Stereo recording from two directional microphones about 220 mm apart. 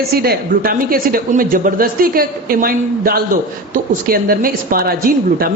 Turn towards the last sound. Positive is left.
turn(degrees=-40)  # may be behind; listen again after turning